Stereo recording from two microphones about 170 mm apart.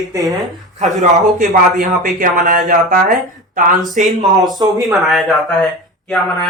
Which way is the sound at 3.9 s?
45° right (ahead or behind).